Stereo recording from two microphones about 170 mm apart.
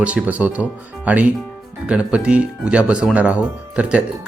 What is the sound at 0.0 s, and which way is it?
Speech, 5° right (ahead or behind).